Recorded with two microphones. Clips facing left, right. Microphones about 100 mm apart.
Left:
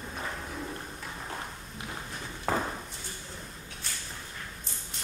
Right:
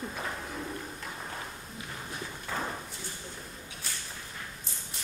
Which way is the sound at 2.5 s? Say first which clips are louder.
Left 7 dB; 45° left (ahead or behind).